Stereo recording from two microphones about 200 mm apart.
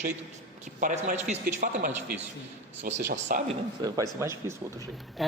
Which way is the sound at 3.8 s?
20° right (ahead or behind).